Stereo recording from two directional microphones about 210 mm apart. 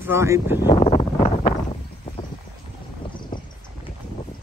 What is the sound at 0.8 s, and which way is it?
Wind noise, 30° left (ahead or behind).